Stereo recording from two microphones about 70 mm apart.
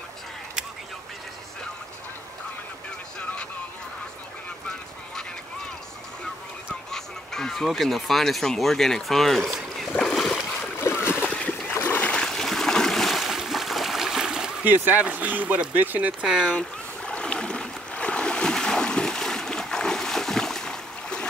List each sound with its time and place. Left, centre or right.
6.9 s speech: centre
9.9 s splash: centre
10.8 s splash: left
11.2 s splash: left
11.9 s trickle: centre
12.3 s stream: centre
14.6 s speech: right
16.3 s speech: centre
16.5 s boat: centre